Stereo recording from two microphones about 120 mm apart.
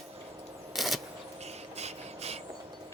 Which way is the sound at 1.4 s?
65° right (ahead or behind).